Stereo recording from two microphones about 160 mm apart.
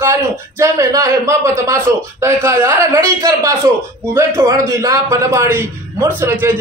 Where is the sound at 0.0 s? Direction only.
20° right (ahead or behind).